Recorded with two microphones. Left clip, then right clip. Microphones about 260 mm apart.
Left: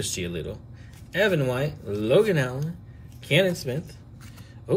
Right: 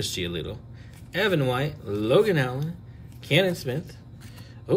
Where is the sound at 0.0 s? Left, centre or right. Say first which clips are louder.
Right 1 dB; centre.